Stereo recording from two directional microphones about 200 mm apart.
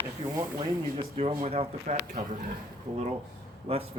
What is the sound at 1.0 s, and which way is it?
A man's voice, 30° right (ahead or behind).